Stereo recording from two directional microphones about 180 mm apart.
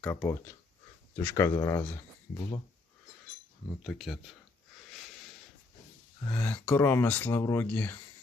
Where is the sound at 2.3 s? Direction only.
35° left (ahead or behind).